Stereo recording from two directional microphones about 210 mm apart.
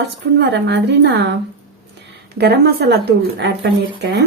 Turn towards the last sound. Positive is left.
turn(degrees=-55)  # may be behind; listen again after turning